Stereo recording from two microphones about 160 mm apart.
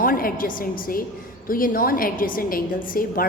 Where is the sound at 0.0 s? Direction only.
65° left (ahead or behind).